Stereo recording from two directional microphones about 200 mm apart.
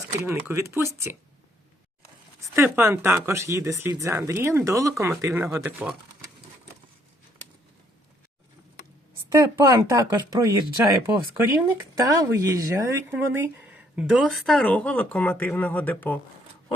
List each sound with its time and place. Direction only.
0.2 s speech: 10° right (ahead or behind)
2.4 s speech: 10° right (ahead or behind)
9.6 s speech: 15° right (ahead or behind); by 16.1 s 10° left (ahead or behind)